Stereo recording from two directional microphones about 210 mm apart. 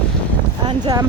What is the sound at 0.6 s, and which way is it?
Speech, 20° right (ahead or behind).